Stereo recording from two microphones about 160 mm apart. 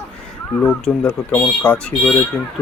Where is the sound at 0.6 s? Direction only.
10° left (ahead or behind).